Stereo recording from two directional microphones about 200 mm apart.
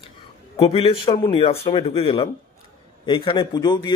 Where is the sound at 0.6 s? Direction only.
30° left (ahead or behind).